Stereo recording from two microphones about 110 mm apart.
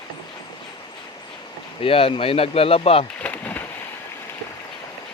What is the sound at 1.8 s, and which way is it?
Speech, 55° left (ahead or behind).